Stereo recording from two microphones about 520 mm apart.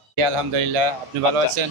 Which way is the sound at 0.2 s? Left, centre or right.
Right.